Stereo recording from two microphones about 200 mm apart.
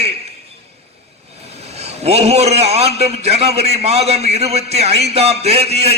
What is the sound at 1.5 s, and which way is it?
A man's voice, 30° right (ahead or behind).